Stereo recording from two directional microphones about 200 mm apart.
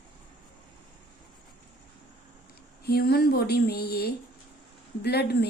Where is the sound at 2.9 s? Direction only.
50° left (ahead or behind).